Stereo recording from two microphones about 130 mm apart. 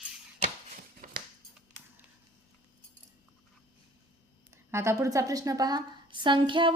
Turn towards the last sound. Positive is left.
turn(degrees=-40)  # may be behind; listen again after turning